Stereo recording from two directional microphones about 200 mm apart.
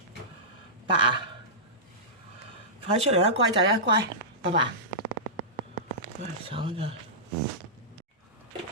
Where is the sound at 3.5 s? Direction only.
75° right (ahead or behind).